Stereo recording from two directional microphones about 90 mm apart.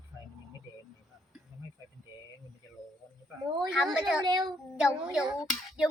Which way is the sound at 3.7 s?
5° right (ahead or behind).